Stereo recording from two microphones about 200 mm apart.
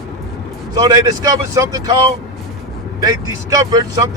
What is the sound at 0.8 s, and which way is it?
Speech, 20° right (ahead or behind).